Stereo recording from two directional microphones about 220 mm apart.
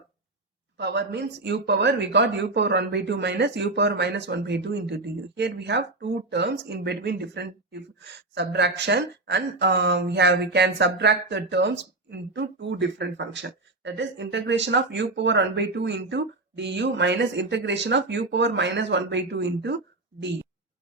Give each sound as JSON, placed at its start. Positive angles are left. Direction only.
{"t": 0.8, "sound": "speech", "side_deg": -50}